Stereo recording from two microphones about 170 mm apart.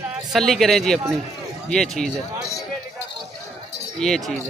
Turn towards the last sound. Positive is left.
turn(degrees=0)  # may be behind; listen again after turning